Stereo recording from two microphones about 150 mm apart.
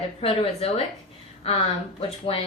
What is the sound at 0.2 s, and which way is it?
Speech, 40° left (ahead or behind).